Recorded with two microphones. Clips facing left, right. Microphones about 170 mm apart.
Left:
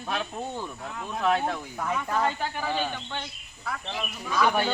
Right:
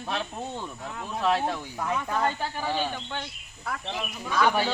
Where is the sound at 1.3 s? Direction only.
25° right (ahead or behind).